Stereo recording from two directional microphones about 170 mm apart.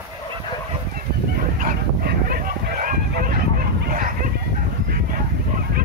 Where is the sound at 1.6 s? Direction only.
65° right (ahead or behind).